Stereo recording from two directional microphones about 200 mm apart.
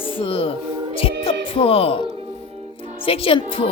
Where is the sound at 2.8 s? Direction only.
30° left (ahead or behind).